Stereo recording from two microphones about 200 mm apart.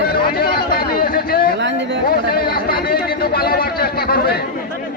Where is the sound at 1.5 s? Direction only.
65° right (ahead or behind).